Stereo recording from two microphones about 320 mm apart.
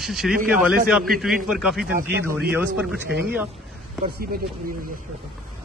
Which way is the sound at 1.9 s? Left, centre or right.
Right.